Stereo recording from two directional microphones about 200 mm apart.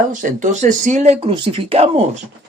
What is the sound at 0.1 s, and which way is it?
Speech, 40° right (ahead or behind).